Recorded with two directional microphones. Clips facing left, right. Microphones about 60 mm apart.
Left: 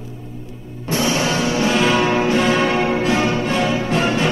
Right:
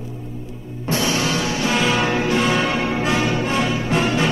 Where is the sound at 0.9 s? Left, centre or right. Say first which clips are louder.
Left 2 dB; left.